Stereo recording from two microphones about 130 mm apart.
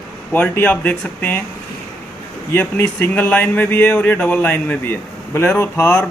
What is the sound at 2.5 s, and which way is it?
Speech, 15° left (ahead or behind).